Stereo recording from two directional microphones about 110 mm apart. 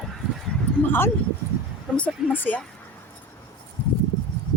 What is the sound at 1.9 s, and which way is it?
Speech, 15° left (ahead or behind).